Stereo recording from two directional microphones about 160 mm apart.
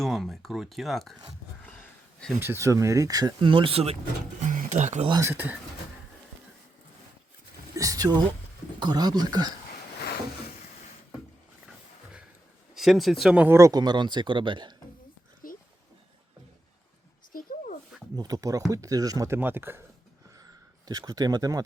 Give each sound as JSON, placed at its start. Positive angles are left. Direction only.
{"t": 0.0, "sound": "speech", "side_deg": 0}
{"t": 2.4, "sound": "speech", "side_deg": -15}
{"t": 4.4, "sound": "speech", "side_deg": -50}
{"t": 5.2, "sound": "speech", "side_deg": -10}
{"t": 7.8, "sound": "speech", "side_deg": -25}
{"t": 12.7, "sound": "speech", "side_deg": 0}
{"t": 15.4, "sound": "a sound", "side_deg": 60}
{"t": 18.2, "sound": "speech", "side_deg": -20}
{"t": 20.4, "sound": "a sound", "side_deg": -25}